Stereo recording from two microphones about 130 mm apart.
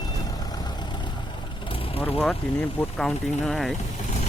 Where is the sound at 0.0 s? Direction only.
30° left (ahead or behind).